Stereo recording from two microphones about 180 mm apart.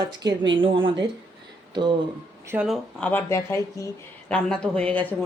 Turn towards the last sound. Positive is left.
turn(degrees=5)  # may be behind; listen again after turning